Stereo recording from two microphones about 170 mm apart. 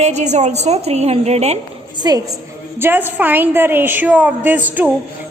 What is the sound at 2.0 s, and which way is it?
Speech, 25° right (ahead or behind).